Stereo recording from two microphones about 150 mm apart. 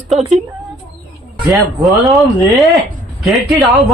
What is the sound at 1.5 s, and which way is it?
Speech, centre (ahead or behind).